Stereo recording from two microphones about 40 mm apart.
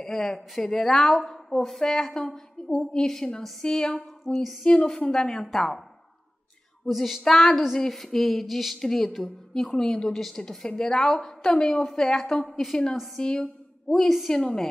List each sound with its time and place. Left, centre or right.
0.0 s a woman's voice: centre
4.2 s speech: centre
4.6 s a woman's voice: centre
7.0 s a woman's voice: centre
12.4 s speech: centre
13.2 s a woman's voice: left
14.0 s speech: centre
14.3 s a woman's voice: centre